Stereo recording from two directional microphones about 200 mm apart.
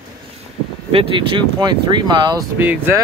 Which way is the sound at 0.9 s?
25° right (ahead or behind).